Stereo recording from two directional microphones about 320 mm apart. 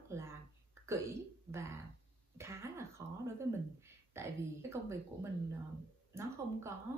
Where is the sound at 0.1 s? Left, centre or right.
Centre.